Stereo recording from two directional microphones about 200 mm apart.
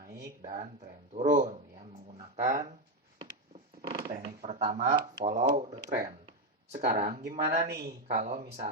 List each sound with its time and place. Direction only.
1.3 s speech: 40° right (ahead or behind)
3.8 s a sound: 25° right (ahead or behind)
4.2 s speech: 35° right (ahead or behind)